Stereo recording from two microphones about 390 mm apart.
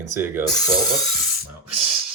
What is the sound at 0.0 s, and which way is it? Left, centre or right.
Filing, centre.